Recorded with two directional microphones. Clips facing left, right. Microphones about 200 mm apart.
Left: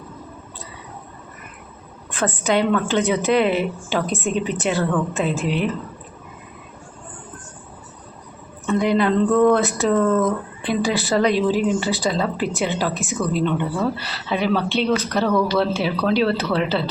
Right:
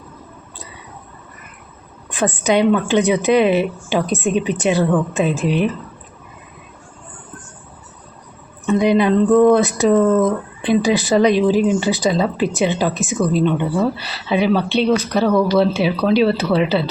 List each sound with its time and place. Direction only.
2.0 s speech: 15° right (ahead or behind)
8.6 s speech: 15° right (ahead or behind)